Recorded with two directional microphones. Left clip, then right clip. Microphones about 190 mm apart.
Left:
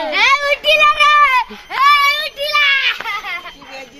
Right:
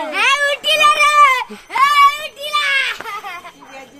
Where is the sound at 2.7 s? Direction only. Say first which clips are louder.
Left 2 dB; 45° right (ahead or behind).